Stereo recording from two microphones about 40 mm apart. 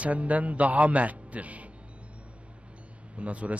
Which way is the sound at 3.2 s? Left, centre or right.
Right.